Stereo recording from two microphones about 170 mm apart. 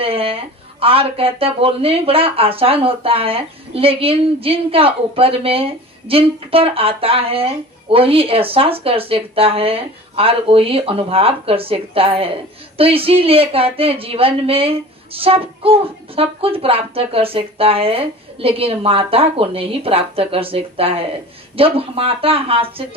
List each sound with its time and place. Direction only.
0.0 s speech: 35° right (ahead or behind)